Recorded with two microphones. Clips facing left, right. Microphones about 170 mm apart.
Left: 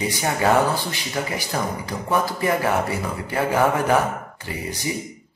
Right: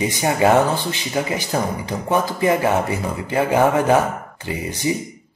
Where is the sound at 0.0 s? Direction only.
20° right (ahead or behind).